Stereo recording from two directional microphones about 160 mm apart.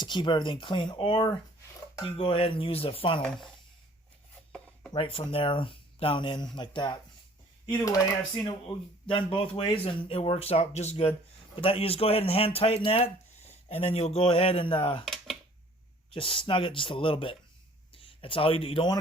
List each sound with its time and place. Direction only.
0.0 s speech: 30° left (ahead or behind)
3.2 s speech: 5° left (ahead or behind)
4.9 s speech: 35° left (ahead or behind)
7.7 s speech: 20° left (ahead or behind)
9.0 s speech: 35° left (ahead or behind)
15.0 s a sound: centre (ahead or behind)
16.0 s speech: 35° left (ahead or behind)